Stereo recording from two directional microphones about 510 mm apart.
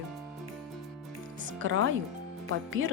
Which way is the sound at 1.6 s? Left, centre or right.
Right.